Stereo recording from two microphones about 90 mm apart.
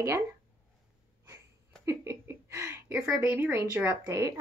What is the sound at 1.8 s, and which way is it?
A woman's voice, 30° right (ahead or behind).